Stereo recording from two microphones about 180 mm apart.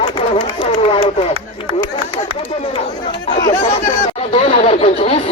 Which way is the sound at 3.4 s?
35° left (ahead or behind).